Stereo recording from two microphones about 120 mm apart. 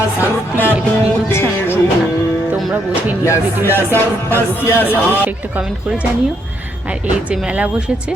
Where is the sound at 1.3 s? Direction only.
20° left (ahead or behind).